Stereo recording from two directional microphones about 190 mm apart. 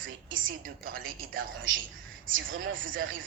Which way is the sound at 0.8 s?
50° right (ahead or behind).